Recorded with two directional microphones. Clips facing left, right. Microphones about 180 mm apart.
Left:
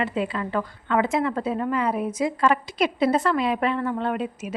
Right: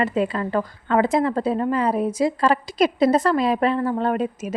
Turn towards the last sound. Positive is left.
turn(degrees=-40)  # may be behind; listen again after turning